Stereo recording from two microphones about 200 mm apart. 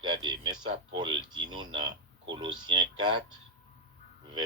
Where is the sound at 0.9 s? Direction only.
25° right (ahead or behind).